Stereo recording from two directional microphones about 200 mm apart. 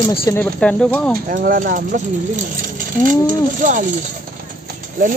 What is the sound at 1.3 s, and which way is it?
Speech, 45° right (ahead or behind).